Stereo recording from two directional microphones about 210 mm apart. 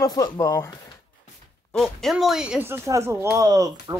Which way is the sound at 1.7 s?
Centre (ahead or behind).